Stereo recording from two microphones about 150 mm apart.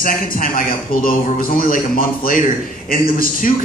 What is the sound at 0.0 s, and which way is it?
A man's voice, 65° left (ahead or behind).